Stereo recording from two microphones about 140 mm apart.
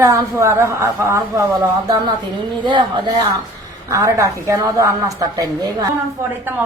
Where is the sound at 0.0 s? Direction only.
20° right (ahead or behind).